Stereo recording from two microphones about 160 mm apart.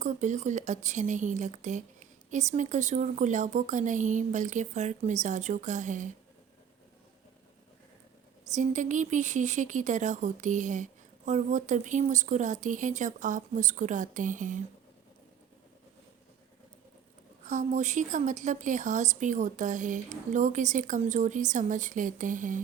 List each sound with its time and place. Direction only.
0.0 s a woman's voice: 50° right (ahead or behind)
8.5 s a woman's voice: 50° right (ahead or behind)
17.4 s a woman's voice: 50° right (ahead or behind)